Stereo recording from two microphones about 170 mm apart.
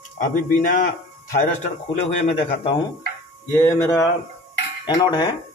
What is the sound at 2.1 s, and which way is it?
Speech, 40° left (ahead or behind).